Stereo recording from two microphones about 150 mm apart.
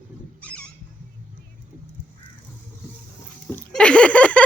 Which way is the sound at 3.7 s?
5° left (ahead or behind).